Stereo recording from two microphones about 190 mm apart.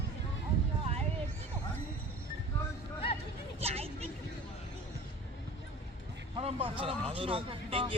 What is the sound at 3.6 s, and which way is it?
Vehicle, 35° right (ahead or behind).